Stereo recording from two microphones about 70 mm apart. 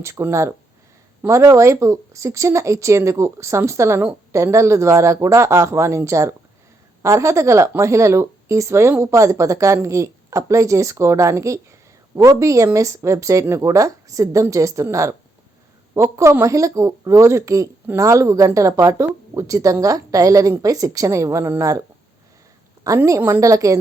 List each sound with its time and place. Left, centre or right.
0.0 s a woman's voice: right
23.0 s speech: right